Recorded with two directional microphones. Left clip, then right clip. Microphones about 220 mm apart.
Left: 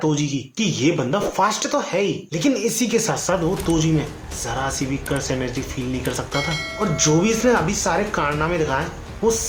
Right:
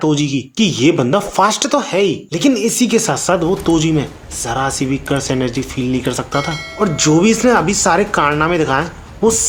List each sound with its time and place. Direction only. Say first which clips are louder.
0.0 s speech: right 6 dB; 40° right (ahead or behind)